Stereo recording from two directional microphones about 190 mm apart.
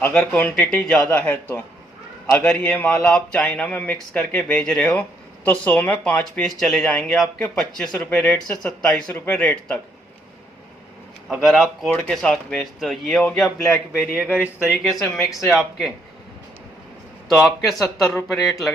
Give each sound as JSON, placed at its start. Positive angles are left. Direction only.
{"t": 0.0, "sound": "a man's voice", "side_deg": 5}
{"t": 11.3, "sound": "speech", "side_deg": 0}
{"t": 17.3, "sound": "speech", "side_deg": 0}